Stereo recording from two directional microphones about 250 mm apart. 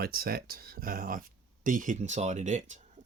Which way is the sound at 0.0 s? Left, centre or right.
Right.